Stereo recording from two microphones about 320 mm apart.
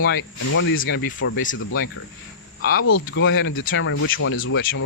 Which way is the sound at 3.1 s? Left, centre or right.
Left.